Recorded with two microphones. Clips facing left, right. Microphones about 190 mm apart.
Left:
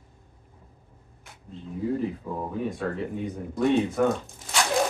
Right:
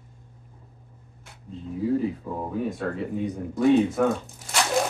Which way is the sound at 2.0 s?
Centre (ahead or behind).